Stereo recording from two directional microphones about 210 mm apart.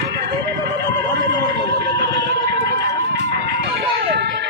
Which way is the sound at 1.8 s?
50° right (ahead or behind).